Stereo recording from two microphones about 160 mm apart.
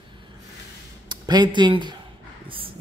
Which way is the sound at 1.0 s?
25° right (ahead or behind).